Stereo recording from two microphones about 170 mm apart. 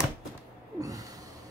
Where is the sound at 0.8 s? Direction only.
20° right (ahead or behind).